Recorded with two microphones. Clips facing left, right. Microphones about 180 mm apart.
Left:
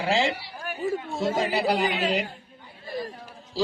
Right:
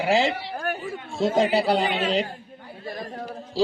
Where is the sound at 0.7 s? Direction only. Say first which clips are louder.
Right 6 dB; 55° right (ahead or behind).